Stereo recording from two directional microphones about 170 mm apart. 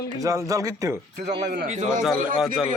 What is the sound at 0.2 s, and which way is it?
Speech, 20° right (ahead or behind).